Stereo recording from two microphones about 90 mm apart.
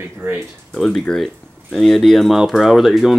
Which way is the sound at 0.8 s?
5° left (ahead or behind).